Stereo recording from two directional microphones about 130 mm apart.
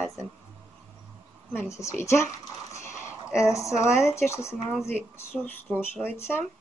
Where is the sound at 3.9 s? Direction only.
20° left (ahead or behind).